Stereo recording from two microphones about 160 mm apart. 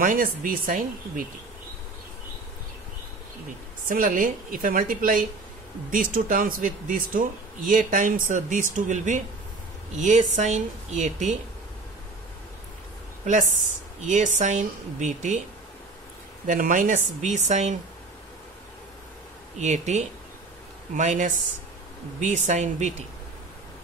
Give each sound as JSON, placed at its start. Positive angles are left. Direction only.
{"t": 0.0, "sound": "speech", "side_deg": -60}
{"t": 3.9, "sound": "a woman's voice", "side_deg": -60}
{"t": 13.2, "sound": "a woman's voice", "side_deg": -50}
{"t": 16.4, "sound": "a woman's voice", "side_deg": -60}
{"t": 19.6, "sound": "a woman's voice", "side_deg": -45}